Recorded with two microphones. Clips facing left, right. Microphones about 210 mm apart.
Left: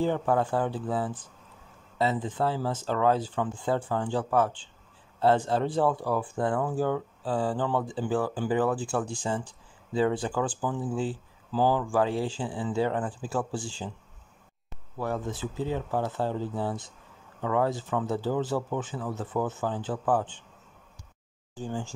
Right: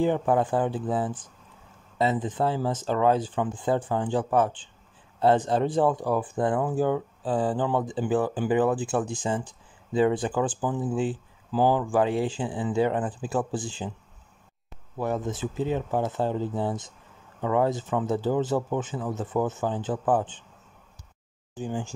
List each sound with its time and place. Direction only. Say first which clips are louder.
0.0 s speech: right 3 dB; 15° right (ahead or behind)
15.0 s speech: right 3 dB; 20° right (ahead or behind)
21.5 s speech: right 2 dB; 15° right (ahead or behind)